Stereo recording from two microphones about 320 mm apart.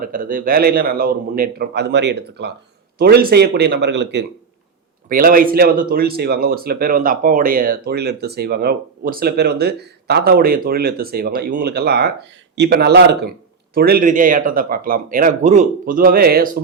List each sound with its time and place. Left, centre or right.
0.0 s speech: right